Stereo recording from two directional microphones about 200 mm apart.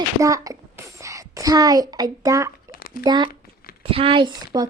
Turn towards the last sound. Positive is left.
turn(degrees=-20)  # may be behind; listen again after turning